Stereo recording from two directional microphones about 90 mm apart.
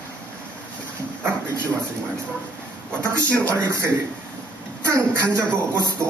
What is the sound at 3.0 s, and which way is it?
A man's voice, 30° right (ahead or behind).